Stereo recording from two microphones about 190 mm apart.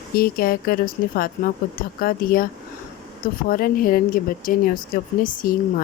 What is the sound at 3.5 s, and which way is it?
Speech, 50° left (ahead or behind).